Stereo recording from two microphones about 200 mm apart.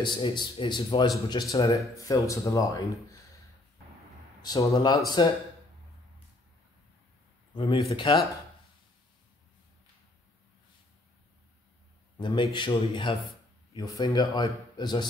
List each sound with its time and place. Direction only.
0.0 s speech: 20° left (ahead or behind)
4.4 s speech: 20° left (ahead or behind)
7.5 s speech: 25° left (ahead or behind)
12.2 s speech: 25° left (ahead or behind)